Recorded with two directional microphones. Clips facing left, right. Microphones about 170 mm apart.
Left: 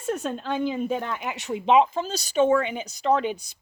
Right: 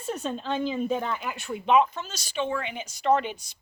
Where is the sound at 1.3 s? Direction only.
90° left.